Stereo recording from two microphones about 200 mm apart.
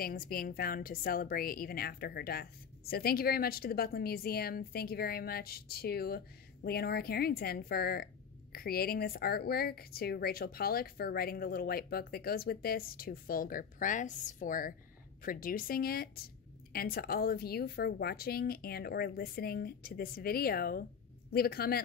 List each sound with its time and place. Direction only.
0.0 s a woman's voice: 45° left (ahead or behind)